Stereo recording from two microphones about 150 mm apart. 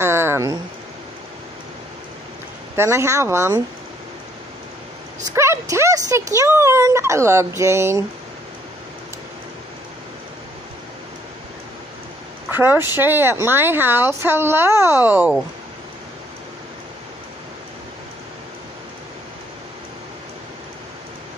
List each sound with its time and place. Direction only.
0.0 s a sound: 15° right (ahead or behind)
2.7 s speech: 20° right (ahead or behind)
5.2 s speech: 20° right (ahead or behind)
12.4 s speech: 15° right (ahead or behind)